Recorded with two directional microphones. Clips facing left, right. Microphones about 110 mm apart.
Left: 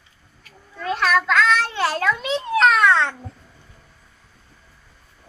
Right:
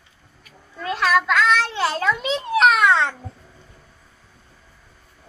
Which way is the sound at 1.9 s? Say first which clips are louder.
Even; 20° right (ahead or behind).